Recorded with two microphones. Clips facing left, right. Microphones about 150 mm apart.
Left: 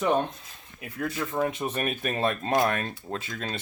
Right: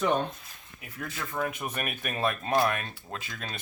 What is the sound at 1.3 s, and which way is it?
Speech, 30° left (ahead or behind).